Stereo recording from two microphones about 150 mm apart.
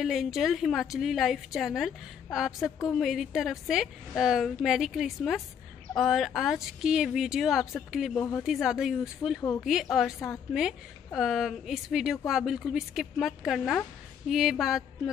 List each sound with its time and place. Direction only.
0.0 s a woman's voice: centre (ahead or behind)
8.2 s speech: 15° left (ahead or behind)
8.5 s a woman's voice: centre (ahead or behind)
11.1 s a woman's voice: centre (ahead or behind)